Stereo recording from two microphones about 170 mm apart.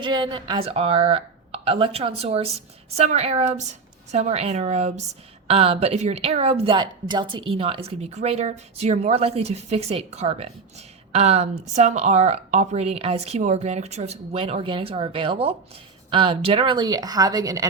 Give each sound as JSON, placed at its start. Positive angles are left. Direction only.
{"t": 0.0, "sound": "speech", "side_deg": -30}